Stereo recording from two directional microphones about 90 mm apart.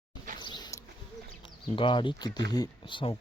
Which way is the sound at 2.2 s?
45° left (ahead or behind).